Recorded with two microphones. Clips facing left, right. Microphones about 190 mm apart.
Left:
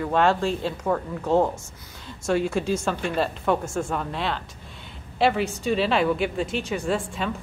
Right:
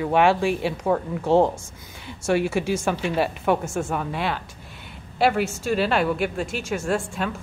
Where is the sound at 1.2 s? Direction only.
25° right (ahead or behind).